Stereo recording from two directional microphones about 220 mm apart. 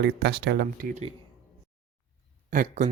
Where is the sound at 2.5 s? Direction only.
35° right (ahead or behind).